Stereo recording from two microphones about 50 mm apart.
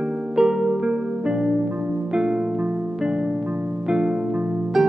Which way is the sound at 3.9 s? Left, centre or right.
Centre.